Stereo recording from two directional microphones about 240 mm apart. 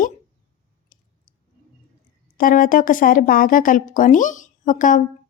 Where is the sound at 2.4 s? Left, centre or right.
Left.